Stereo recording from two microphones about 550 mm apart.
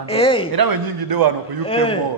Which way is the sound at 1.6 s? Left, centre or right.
Centre.